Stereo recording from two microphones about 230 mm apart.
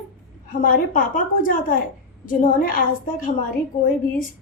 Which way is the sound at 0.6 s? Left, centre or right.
Left.